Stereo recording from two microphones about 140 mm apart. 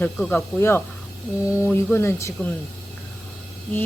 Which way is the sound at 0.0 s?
10° left (ahead or behind).